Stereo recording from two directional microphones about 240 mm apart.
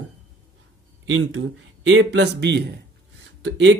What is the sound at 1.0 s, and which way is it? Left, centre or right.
Speech, right.